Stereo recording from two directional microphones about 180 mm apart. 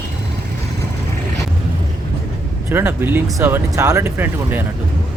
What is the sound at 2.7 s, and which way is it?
Speech, 10° right (ahead or behind).